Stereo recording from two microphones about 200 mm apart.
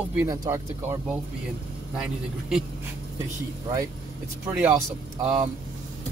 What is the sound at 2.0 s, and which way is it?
Speech, 5° right (ahead or behind).